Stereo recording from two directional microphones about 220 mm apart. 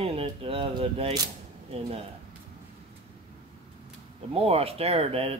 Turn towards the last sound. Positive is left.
turn(degrees=-25)  # may be behind; listen again after turning